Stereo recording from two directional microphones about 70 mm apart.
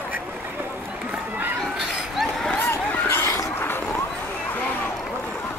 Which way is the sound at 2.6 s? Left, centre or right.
Left.